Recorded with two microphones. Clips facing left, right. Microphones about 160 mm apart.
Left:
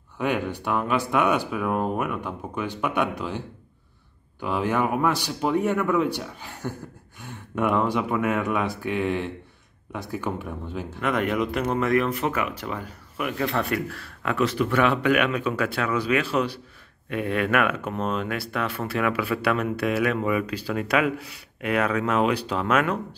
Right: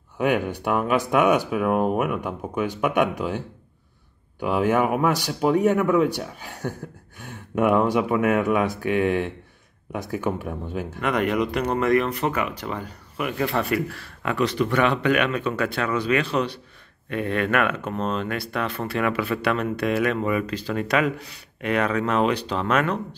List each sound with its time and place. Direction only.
0.2 s speech: 10° right (ahead or behind)
4.4 s speech: 10° right (ahead or behind)
6.0 s speech: 45° right (ahead or behind)
7.5 s speech: 10° right (ahead or behind)
11.0 s speech: centre (ahead or behind)